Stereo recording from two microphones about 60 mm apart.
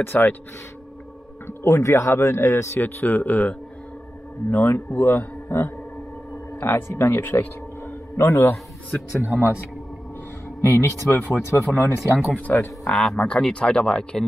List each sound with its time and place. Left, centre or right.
0.0 s a man's voice: left
1.5 s speech: left
2.8 s a man's voice: left
6.7 s speech: left
7.8 s a sound: left
9.2 s a man's voice: right
10.6 s a man's voice: left
12.3 s speech: left
12.8 s speech: centre